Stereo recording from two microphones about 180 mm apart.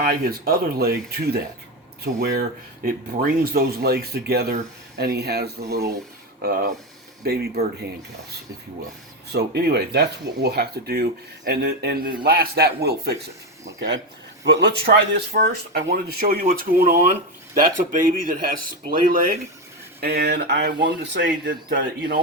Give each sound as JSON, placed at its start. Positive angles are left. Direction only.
{"t": 0.0, "sound": "speech", "side_deg": -55}
{"t": 9.3, "sound": "speech", "side_deg": -65}
{"t": 13.7, "sound": "speech", "side_deg": -90}
{"t": 14.4, "sound": "speech", "side_deg": -70}
{"t": 16.7, "sound": "speech", "side_deg": -45}
{"t": 20.0, "sound": "speech", "side_deg": -65}